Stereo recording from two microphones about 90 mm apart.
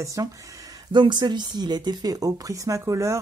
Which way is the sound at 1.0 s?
55° right (ahead or behind).